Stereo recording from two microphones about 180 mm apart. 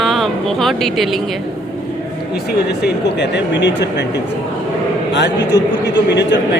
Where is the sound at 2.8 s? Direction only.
75° left (ahead or behind).